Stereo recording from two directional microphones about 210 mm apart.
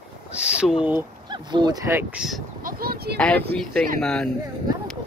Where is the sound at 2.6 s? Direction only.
45° right (ahead or behind).